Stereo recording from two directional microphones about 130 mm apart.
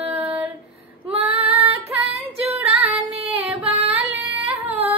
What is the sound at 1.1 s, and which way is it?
Female singing, 50° right (ahead or behind).